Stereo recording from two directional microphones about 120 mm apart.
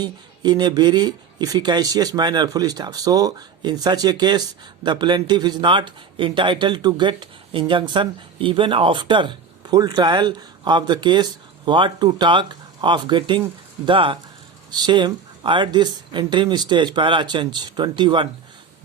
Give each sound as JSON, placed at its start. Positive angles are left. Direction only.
{"t": 0.0, "sound": "speech", "side_deg": -35}